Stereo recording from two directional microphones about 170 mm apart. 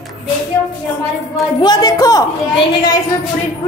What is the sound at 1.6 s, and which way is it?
Speech, 25° left (ahead or behind).